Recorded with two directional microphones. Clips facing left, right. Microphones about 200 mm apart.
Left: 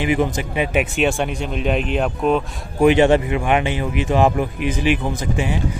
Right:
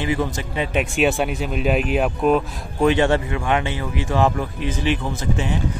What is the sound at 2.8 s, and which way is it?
A man's voice, 15° left (ahead or behind).